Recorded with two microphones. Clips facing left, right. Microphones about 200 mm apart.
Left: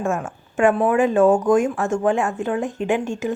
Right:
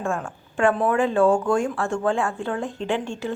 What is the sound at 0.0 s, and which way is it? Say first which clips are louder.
Speech: left 3 dB; 20° left (ahead or behind).